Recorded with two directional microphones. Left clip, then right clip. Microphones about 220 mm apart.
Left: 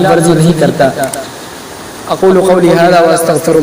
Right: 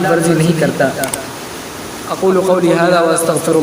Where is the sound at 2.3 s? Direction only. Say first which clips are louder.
Left 4 dB; 20° left (ahead or behind).